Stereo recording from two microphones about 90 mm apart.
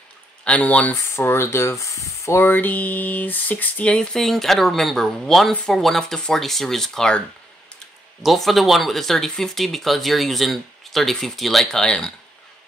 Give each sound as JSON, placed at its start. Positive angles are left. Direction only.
{"t": 0.5, "sound": "speech", "side_deg": 15}
{"t": 1.1, "sound": "speech", "side_deg": 25}
{"t": 8.2, "sound": "speech", "side_deg": 0}